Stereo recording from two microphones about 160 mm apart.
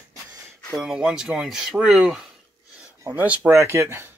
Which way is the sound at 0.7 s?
5° right (ahead or behind).